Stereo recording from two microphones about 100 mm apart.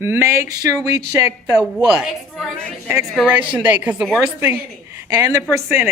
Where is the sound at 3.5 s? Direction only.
10° right (ahead or behind).